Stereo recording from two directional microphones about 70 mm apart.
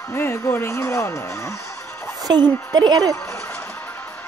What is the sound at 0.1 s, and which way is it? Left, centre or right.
Music, left.